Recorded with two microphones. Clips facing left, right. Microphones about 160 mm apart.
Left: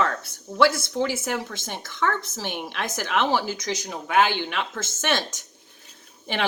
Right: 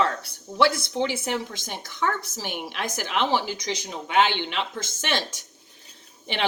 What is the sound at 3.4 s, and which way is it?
Speech, 45° left (ahead or behind).